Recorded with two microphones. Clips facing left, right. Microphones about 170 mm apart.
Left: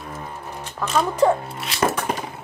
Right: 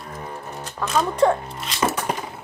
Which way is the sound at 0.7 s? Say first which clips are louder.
Left 1 dB; centre (ahead or behind).